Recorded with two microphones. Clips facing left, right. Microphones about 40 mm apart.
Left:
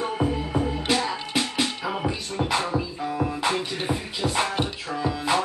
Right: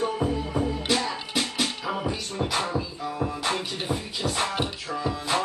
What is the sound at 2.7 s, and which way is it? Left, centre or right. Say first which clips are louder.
Music: left 3 dB; centre.